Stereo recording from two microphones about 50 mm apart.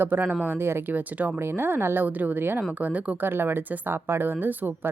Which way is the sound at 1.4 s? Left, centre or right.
Right.